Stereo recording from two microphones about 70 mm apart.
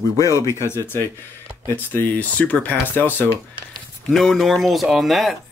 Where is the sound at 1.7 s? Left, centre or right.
Left.